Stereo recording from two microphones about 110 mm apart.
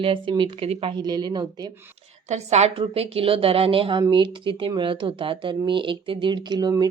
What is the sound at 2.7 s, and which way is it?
Speech, 60° right (ahead or behind).